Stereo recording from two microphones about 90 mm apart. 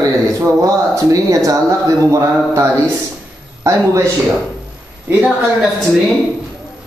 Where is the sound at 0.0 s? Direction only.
35° right (ahead or behind).